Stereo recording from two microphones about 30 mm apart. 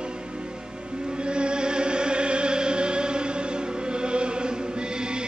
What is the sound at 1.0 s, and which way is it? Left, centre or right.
Music, right.